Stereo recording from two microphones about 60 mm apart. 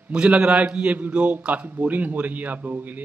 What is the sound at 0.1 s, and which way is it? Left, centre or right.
A man's voice, right.